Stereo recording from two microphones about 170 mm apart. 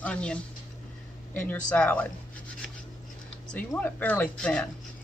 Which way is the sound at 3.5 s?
10° left (ahead or behind).